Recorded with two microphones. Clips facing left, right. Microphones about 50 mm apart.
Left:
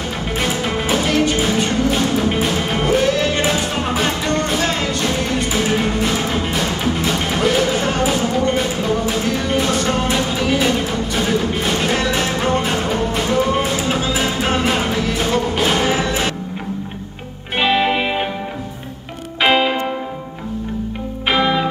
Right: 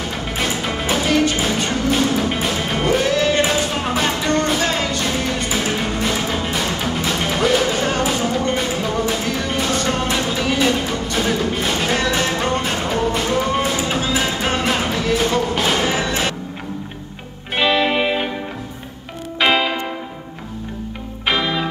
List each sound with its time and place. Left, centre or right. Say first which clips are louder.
0.4 s music: left 2 dB; centre
17.6 s music: left 1 dB; centre
19.4 s music: left 2 dB; centre
21.3 s music: left 3 dB; centre